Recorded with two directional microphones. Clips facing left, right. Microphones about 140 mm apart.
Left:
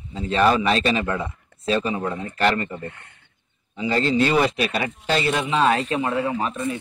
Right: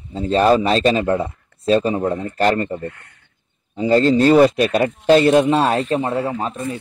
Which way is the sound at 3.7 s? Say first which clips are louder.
Right 7 dB; 40° right (ahead or behind).